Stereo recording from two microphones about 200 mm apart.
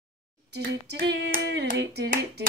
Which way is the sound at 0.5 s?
55° right (ahead or behind).